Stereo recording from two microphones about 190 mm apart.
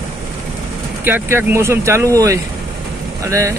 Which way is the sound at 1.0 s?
10° right (ahead or behind).